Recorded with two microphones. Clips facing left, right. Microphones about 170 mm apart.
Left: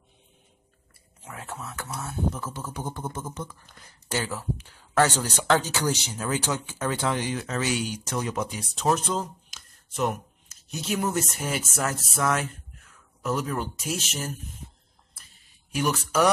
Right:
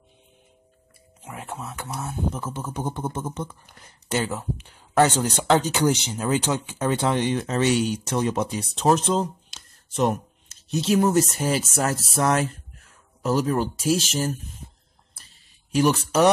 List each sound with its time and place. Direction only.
1.2 s speech: 20° right (ahead or behind); by 14.4 s 35° right (ahead or behind)
15.7 s speech: 30° right (ahead or behind)